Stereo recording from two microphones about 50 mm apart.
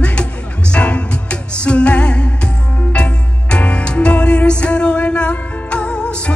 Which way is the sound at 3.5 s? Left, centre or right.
Left.